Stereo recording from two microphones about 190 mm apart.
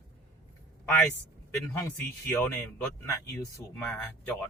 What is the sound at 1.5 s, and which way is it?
A man's voice, 15° left (ahead or behind).